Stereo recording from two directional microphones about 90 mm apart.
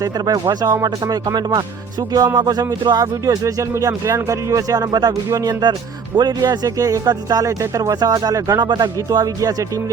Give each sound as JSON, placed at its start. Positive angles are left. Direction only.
{"t": 0.0, "sound": "speech", "side_deg": -45}
{"t": 8.5, "sound": "speech", "side_deg": -50}
{"t": 9.0, "sound": "speech", "side_deg": -40}